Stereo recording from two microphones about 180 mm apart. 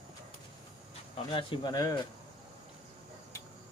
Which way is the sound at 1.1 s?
30° left (ahead or behind).